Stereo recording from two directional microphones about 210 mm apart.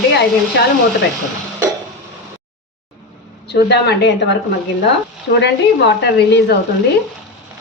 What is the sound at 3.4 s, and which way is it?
Speech, 50° left (ahead or behind).